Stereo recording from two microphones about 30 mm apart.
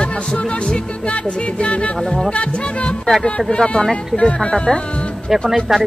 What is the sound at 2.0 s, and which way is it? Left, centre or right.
Speech, centre.